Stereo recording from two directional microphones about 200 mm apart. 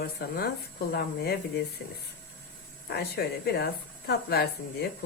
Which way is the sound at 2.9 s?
55° left (ahead or behind).